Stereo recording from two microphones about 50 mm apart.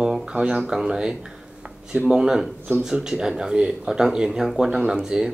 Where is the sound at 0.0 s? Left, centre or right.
Centre.